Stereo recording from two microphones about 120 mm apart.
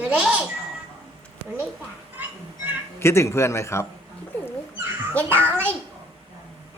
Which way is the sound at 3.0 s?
20° left (ahead or behind).